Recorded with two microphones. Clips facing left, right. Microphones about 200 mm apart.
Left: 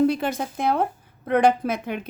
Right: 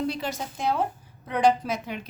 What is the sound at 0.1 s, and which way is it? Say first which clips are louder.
A woman's voice: left 6 dB; 55° left (ahead or behind).